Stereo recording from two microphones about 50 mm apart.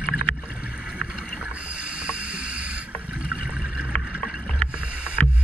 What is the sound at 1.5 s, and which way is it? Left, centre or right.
Rowboat, right.